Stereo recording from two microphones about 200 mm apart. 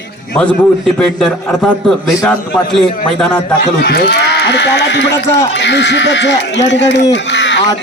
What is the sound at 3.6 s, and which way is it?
Speech, 55° left (ahead or behind).